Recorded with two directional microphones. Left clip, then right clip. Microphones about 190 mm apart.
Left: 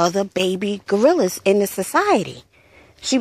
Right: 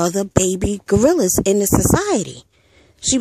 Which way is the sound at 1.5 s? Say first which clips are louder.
Even; 35° right (ahead or behind).